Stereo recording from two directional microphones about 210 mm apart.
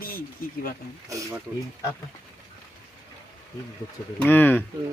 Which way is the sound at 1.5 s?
10° right (ahead or behind).